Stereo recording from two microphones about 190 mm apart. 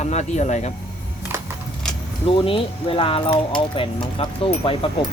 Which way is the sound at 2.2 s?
30° left (ahead or behind).